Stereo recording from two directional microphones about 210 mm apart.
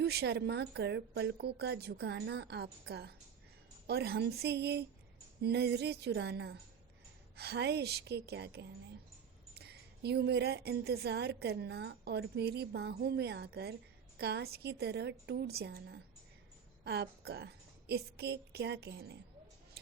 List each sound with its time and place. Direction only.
0.0 s a woman's voice: 50° right (ahead or behind)